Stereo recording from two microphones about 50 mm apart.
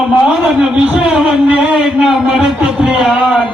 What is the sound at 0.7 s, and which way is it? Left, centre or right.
A man's voice, centre.